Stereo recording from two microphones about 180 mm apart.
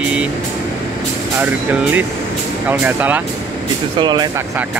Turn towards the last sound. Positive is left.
turn(degrees=-25)  # may be behind; listen again after turning